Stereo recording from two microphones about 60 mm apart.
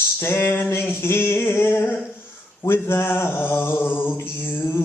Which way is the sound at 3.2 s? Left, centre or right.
Left.